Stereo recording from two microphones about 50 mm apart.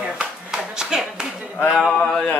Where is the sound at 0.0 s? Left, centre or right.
Centre.